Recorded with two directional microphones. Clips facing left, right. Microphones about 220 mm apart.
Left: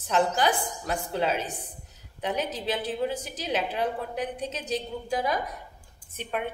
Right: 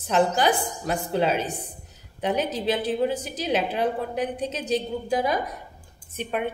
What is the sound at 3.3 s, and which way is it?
A woman's voice, 20° right (ahead or behind).